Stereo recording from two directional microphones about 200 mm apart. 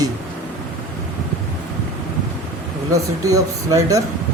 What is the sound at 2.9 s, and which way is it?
Speech, 15° right (ahead or behind).